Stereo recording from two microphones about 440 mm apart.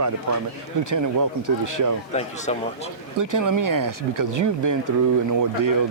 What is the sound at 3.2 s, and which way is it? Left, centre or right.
Speech, right.